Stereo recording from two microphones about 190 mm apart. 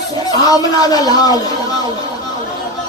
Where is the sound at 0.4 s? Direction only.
20° left (ahead or behind).